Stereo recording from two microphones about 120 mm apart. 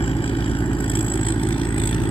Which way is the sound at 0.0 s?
55° left (ahead or behind).